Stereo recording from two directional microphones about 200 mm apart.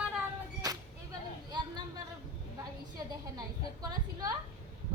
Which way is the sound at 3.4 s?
20° right (ahead or behind).